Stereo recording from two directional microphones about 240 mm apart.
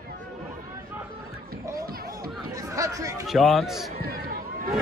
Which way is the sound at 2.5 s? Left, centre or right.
Centre.